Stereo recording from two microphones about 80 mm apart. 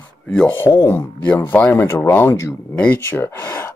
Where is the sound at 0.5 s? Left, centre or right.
Left.